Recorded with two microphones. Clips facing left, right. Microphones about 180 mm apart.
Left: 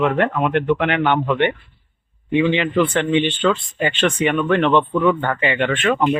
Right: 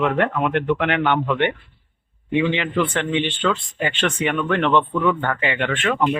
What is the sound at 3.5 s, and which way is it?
Speech, centre (ahead or behind).